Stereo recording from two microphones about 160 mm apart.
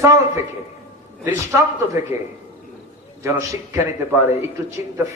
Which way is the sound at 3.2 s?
20° right (ahead or behind).